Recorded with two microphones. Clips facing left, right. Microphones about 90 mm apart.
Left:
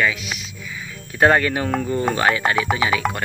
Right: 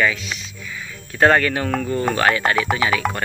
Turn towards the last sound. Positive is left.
turn(degrees=5)  # may be behind; listen again after turning